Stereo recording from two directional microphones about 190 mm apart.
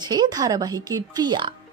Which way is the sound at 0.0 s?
20° right (ahead or behind).